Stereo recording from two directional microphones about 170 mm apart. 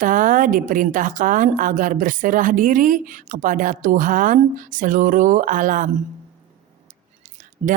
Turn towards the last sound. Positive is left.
turn(degrees=-50)  # may be behind; listen again after turning